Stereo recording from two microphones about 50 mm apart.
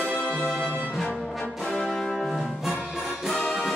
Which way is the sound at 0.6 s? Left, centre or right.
Right.